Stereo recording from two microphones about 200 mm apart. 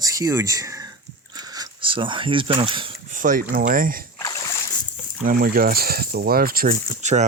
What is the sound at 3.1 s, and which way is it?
Speech, 40° right (ahead or behind).